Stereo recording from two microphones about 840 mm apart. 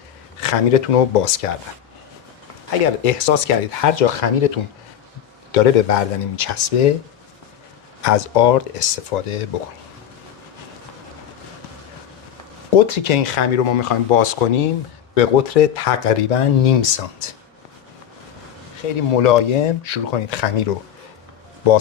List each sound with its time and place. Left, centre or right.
0.3 s speech: left
3.0 s speech: left
8.0 s speech: left
12.7 s speech: left
15.1 s speech: left
19.2 s speech: left